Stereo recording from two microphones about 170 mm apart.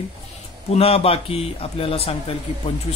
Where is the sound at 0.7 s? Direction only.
35° left (ahead or behind).